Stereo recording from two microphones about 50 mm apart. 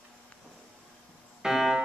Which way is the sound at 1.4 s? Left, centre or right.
Centre.